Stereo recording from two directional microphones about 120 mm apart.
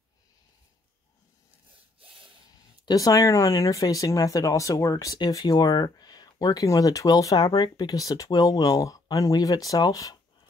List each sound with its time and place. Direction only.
2.8 s speech: 30° left (ahead or behind)